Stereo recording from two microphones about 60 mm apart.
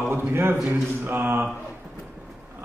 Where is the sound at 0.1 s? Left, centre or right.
Right.